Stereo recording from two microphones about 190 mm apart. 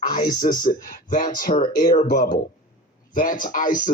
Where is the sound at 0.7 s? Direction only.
45° left (ahead or behind).